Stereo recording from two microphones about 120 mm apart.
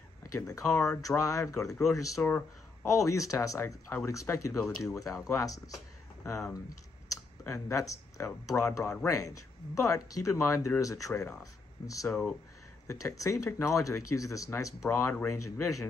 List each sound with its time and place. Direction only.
0.2 s speech: 30° left (ahead or behind)
2.2 s speech: 15° left (ahead or behind)
2.9 s speech: 25° left (ahead or behind)
7.1 s speech: 25° left (ahead or behind)
12.1 s speech: 5° left (ahead or behind)
12.8 s speech: 25° left (ahead or behind)